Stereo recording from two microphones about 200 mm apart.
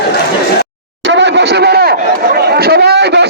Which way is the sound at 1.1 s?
60° right (ahead or behind).